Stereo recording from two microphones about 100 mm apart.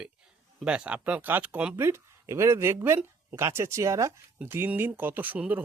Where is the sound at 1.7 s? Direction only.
25° right (ahead or behind).